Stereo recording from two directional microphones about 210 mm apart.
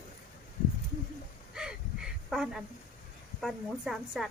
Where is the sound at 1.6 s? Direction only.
5° right (ahead or behind).